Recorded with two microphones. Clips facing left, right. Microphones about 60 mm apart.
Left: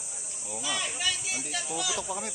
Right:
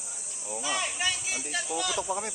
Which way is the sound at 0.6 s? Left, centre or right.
Right.